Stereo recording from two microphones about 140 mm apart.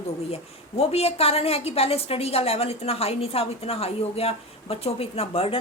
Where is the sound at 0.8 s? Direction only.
45° left (ahead or behind).